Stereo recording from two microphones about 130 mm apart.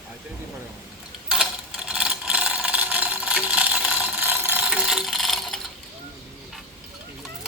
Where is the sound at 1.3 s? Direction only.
5° right (ahead or behind).